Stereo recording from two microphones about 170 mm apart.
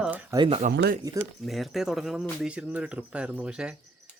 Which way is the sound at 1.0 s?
15° right (ahead or behind).